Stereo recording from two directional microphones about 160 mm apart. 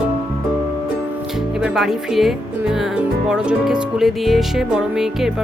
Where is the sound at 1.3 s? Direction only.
5° right (ahead or behind).